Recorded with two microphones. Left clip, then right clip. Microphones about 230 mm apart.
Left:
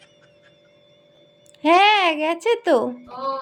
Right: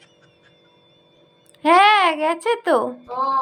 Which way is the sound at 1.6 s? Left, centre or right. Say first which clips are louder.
Right 2 dB; centre.